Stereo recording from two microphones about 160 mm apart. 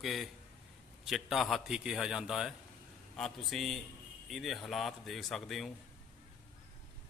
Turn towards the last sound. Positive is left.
turn(degrees=0)  # may be behind; listen again after turning